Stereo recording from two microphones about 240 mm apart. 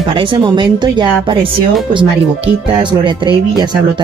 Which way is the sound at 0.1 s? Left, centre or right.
Right.